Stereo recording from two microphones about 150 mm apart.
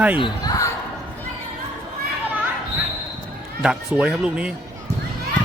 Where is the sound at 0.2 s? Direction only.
25° left (ahead or behind).